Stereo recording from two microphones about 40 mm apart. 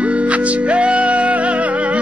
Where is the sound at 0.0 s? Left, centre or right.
Right.